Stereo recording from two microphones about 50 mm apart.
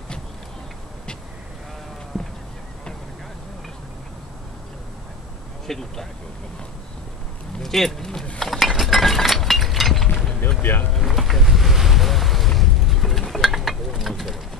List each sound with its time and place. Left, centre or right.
2.1 s horse: centre
5.7 s speech: centre
7.6 s speech: centre
8.4 s a sound: centre
10.6 s speech: left
10.9 s boat: centre
12.4 s a sound: centre